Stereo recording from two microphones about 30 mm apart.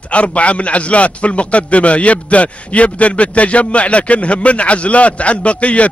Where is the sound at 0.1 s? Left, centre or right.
Left.